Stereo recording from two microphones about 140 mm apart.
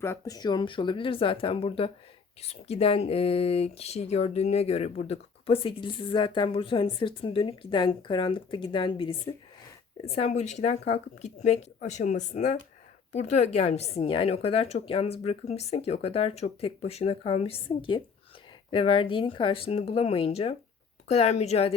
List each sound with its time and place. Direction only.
0.0 s speech: 20° left (ahead or behind); by 9.3 s 40° left (ahead or behind)
10.1 s a woman's voice: 50° left (ahead or behind)